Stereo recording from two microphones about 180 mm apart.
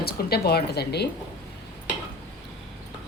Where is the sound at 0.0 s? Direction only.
60° left (ahead or behind).